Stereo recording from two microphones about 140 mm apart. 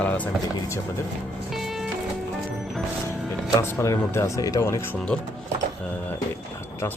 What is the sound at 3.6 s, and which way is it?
Speech, 20° left (ahead or behind).